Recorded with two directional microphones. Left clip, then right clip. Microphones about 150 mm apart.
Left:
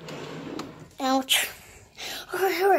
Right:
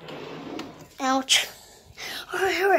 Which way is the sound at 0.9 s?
25° left (ahead or behind).